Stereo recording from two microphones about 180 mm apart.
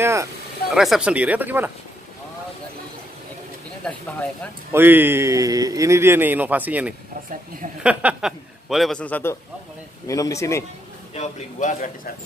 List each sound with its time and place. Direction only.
0.0 s a man's voice: 15° right (ahead or behind)
0.7 s a man's voice: centre (ahead or behind)
4.7 s a man's voice: 10° right (ahead or behind); by 10.6 s 15° left (ahead or behind)
11.1 s a man's voice: 40° left (ahead or behind)